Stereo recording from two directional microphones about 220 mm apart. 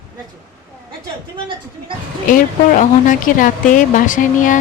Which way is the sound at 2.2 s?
40° left (ahead or behind).